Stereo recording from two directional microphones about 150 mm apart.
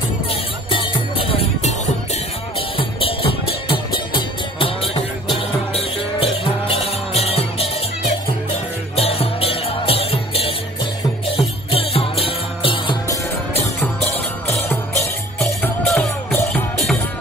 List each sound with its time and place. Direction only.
0.7 s jingle bell: 35° left (ahead or behind)
2.8 s music: 35° left (ahead or behind)
8.9 s music: 40° left (ahead or behind)
13.7 s music: 15° left (ahead or behind)
15.6 s music: 5° left (ahead or behind)